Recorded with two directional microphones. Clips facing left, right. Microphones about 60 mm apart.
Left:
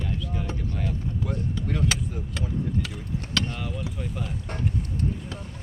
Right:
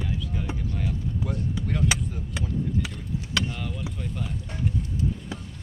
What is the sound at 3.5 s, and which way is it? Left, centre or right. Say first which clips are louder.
Speech: left 1 dB; centre.